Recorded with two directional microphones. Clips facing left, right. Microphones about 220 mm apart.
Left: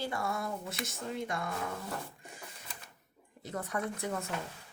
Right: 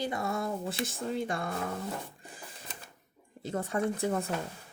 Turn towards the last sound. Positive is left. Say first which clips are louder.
# right 6 dB
turn(degrees=-30)  # may be behind; listen again after turning